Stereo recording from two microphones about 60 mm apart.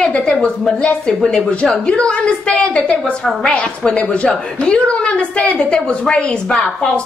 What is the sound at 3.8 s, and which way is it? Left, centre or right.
A woman's voice, centre.